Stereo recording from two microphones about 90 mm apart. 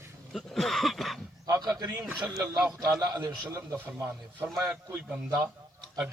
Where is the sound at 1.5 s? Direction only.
45° right (ahead or behind).